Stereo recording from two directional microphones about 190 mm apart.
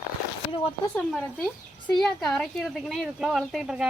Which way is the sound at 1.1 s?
5° left (ahead or behind).